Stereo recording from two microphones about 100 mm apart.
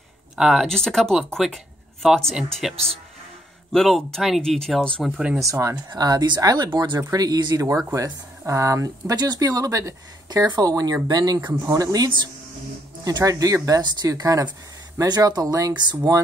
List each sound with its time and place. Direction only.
0.4 s speech: centre (ahead or behind)
5.4 s speech: 30° right (ahead or behind)